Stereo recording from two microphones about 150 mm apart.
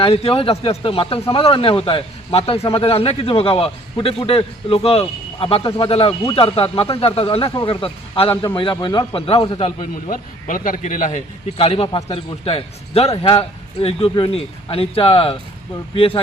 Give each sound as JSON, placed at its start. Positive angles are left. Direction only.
{"t": 0.0, "sound": "a man's voice", "side_deg": 40}
{"t": 5.9, "sound": "a man's voice", "side_deg": 40}
{"t": 9.9, "sound": "speech", "side_deg": 65}
{"t": 11.5, "sound": "a man's voice", "side_deg": 40}